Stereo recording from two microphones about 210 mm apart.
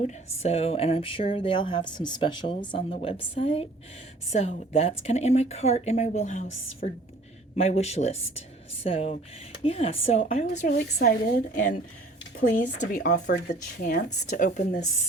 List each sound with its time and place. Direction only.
0.4 s a woman's voice: 30° left (ahead or behind)
10.9 s a woman's voice: 50° left (ahead or behind)